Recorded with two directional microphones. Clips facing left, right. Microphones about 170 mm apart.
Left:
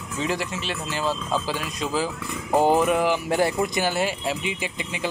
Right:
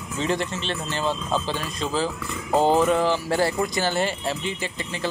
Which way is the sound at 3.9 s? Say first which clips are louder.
Even; 10° left (ahead or behind).